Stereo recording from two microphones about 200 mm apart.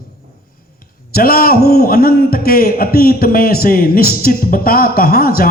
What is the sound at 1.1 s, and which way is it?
A man's voice, 50° left (ahead or behind).